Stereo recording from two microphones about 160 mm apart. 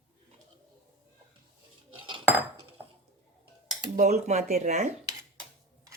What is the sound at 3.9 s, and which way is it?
Speech, 50° right (ahead or behind).